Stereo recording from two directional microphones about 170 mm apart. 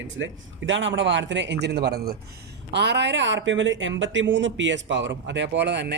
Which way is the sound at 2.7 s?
90° right.